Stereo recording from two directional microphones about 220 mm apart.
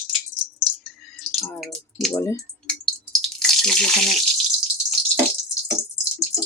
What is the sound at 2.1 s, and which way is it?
Speech, 15° left (ahead or behind).